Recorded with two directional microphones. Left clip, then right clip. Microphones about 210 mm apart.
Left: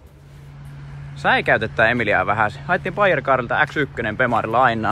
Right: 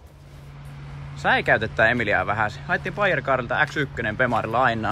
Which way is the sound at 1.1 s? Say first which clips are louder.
Left 3 dB; 5° right (ahead or behind).